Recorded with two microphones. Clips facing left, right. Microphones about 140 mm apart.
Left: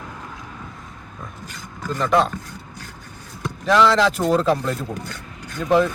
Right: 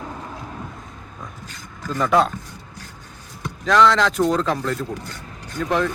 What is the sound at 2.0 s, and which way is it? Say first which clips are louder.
Speech: right 1 dB; centre (ahead or behind).